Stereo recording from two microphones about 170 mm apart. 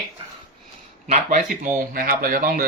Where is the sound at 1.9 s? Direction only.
55° right (ahead or behind).